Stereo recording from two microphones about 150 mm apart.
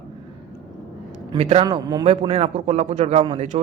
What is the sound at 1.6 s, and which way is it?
Speech, 25° right (ahead or behind).